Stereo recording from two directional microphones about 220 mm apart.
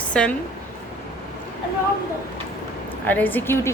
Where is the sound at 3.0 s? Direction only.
10° left (ahead or behind).